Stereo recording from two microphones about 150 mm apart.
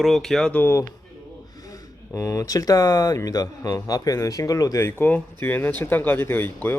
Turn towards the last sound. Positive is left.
turn(degrees=15)  # may be behind; listen again after turning